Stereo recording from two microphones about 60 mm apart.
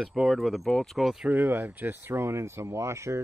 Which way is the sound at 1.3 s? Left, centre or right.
Right.